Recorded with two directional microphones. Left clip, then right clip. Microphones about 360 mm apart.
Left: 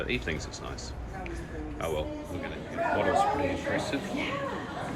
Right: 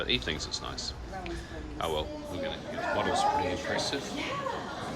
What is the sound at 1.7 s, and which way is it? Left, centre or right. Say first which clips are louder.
Speech: right 1 dB; centre.